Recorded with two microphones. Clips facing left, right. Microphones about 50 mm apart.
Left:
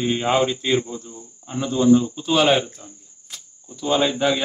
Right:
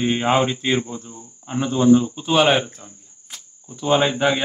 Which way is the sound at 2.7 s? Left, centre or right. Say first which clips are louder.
Even; centre.